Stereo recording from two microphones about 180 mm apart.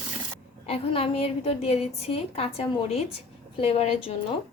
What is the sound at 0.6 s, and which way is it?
A woman's voice, 30° left (ahead or behind).